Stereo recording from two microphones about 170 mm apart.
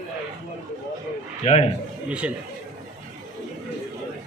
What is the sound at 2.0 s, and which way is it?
Speech, 5° right (ahead or behind).